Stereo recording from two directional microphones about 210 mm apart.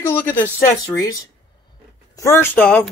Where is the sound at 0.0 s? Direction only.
10° left (ahead or behind).